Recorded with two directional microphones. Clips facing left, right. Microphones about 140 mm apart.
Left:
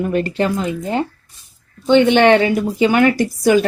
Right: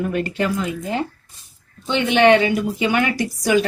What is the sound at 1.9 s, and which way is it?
Speech, 35° left (ahead or behind).